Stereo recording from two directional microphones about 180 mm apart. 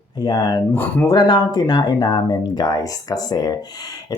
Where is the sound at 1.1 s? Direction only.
20° left (ahead or behind).